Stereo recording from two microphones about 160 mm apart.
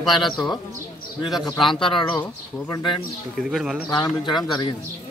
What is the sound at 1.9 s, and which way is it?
Speech, 30° left (ahead or behind).